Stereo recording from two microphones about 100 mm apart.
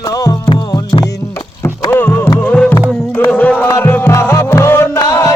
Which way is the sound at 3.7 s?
30° left (ahead or behind).